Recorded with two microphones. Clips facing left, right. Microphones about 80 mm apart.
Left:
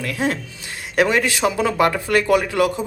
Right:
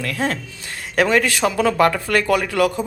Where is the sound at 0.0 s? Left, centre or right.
Centre.